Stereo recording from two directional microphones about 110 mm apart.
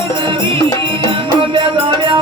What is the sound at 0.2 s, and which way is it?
Music, 50° right (ahead or behind).